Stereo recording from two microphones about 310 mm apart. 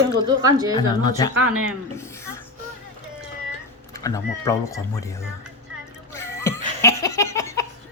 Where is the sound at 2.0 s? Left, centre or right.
Centre.